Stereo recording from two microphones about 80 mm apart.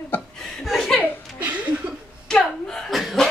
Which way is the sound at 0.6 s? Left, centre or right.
Centre.